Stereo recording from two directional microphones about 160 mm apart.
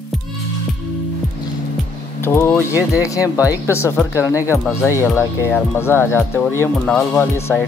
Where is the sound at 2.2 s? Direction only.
15° left (ahead or behind).